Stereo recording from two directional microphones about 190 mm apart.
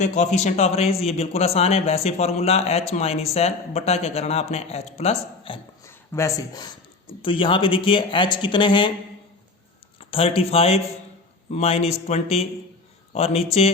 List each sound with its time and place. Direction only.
0.0 s a man's voice: 40° left (ahead or behind)
5.8 s speech: 15° left (ahead or behind)
10.0 s a man's voice: 30° left (ahead or behind)